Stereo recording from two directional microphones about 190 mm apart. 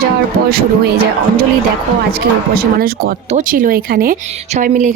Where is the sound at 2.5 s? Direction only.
50° right (ahead or behind).